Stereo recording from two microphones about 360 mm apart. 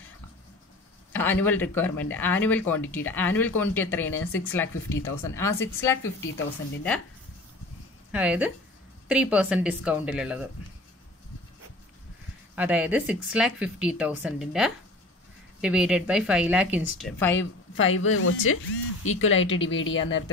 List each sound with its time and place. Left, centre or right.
1.1 s a woman's voice: centre
6.0 s speech: left
8.1 s speech: centre
12.5 s speech: centre
17.4 s speech: left